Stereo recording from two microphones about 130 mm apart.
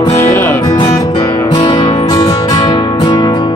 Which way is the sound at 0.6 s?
30° left (ahead or behind).